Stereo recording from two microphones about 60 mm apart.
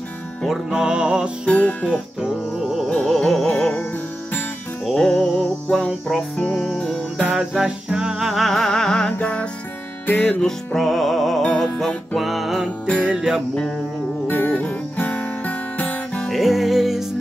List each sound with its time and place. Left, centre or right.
0.7 s music: centre
1.4 s music: left
2.6 s music: centre
3.2 s music: centre
4.8 s music: centre
6.3 s music: left
6.7 s music: centre
7.5 s music: centre
12.2 s music: centre
12.8 s music: centre
13.1 s music: centre
14.2 s music: left
14.5 s guitar: left
16.3 s music: centre